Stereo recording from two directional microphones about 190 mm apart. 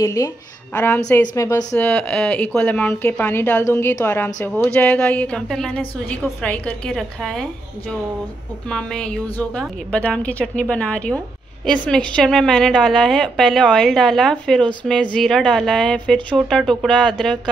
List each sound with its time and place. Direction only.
0.0 s a woman's voice: 15° left (ahead or behind); by 7.4 s centre (ahead or behind)
8.6 s a woman's voice: 5° left (ahead or behind)